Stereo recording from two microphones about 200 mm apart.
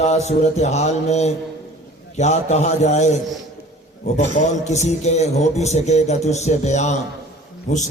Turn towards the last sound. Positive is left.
turn(degrees=35)  # may be behind; listen again after turning